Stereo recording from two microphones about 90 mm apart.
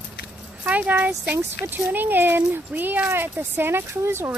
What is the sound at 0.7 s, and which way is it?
Speech, 15° right (ahead or behind).